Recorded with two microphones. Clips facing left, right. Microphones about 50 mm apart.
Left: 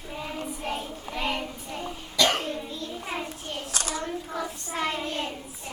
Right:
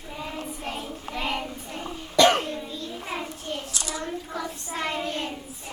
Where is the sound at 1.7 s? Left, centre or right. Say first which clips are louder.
Right 5 dB; right.